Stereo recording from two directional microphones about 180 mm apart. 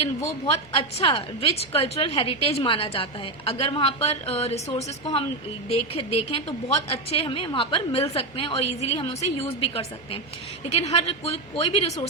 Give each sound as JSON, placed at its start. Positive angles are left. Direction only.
{"t": 0.7, "sound": "a woman's voice", "side_deg": 30}